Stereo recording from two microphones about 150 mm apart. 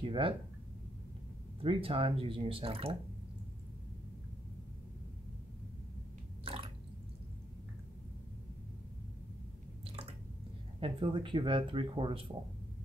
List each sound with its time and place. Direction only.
0.0 s speech: 35° right (ahead or behind)
1.6 s speech: 35° right (ahead or behind)
6.4 s drip: 40° right (ahead or behind)
9.8 s drip: 40° right (ahead or behind)
10.8 s speech: 35° right (ahead or behind)